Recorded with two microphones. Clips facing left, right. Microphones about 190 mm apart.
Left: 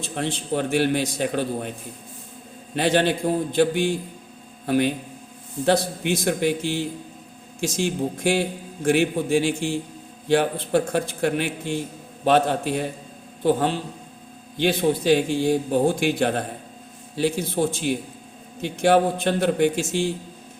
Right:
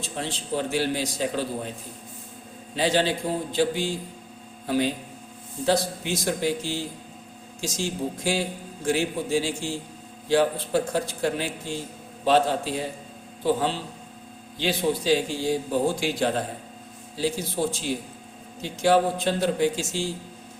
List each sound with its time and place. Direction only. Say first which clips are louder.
0.0 s a man's voice: left 4 dB; 55° left (ahead or behind)
2.7 s a man's voice: left 3 dB; 60° left (ahead or behind)